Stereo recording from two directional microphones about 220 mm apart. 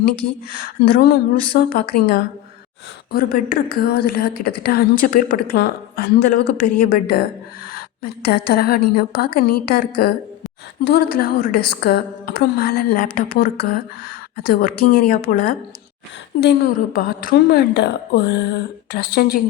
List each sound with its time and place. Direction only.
0.5 s a woman's voice: 40° left (ahead or behind)